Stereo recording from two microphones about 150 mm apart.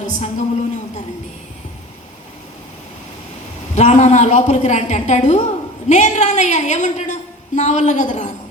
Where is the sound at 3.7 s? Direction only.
50° left (ahead or behind).